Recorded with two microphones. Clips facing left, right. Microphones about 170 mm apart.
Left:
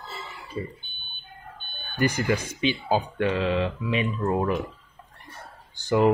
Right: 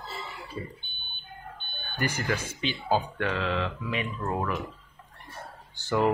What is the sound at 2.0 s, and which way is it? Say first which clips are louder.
Speech: left 6 dB; 20° left (ahead or behind).